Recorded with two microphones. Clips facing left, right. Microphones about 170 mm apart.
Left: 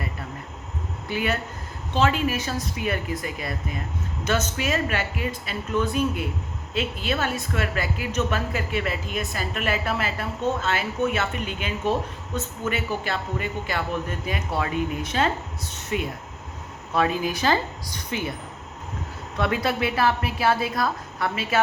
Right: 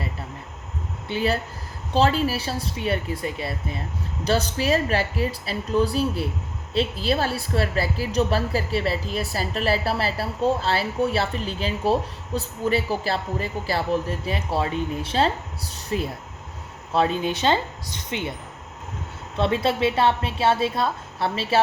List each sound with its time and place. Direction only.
1.0 s a woman's voice: 30° right (ahead or behind)
19.4 s a woman's voice: 30° right (ahead or behind)